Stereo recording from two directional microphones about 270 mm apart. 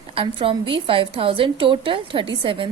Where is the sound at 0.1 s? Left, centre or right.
Centre.